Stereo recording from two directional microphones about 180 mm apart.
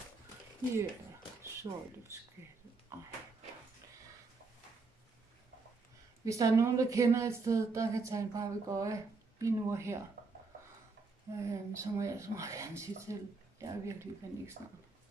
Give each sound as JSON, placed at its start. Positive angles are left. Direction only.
{"t": 1.6, "sound": "speech", "side_deg": -20}
{"t": 6.2, "sound": "a woman's voice", "side_deg": -15}
{"t": 11.3, "sound": "a woman's voice", "side_deg": -15}